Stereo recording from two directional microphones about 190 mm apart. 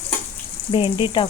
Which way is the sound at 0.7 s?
25° left (ahead or behind).